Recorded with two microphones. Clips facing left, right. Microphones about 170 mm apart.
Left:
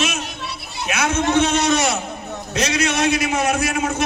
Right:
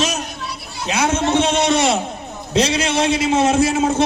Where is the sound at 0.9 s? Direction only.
25° right (ahead or behind).